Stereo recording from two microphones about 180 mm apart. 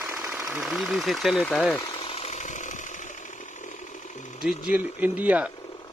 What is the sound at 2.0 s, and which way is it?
Chainsaw, 35° left (ahead or behind).